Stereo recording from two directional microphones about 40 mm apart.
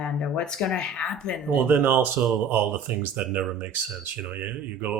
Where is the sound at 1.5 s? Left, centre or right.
Right.